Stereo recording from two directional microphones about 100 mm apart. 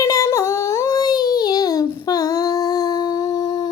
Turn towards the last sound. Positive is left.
turn(degrees=40)  # may be behind; listen again after turning